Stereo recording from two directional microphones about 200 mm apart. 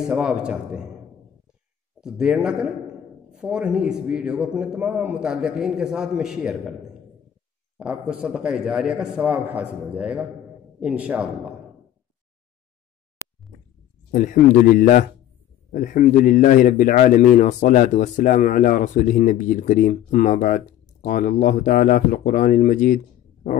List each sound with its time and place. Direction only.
0.0 s a man's voice: centre (ahead or behind)
2.0 s a man's voice: 5° right (ahead or behind)
7.7 s a man's voice: 5° right (ahead or behind)
14.1 s speech: 40° left (ahead or behind)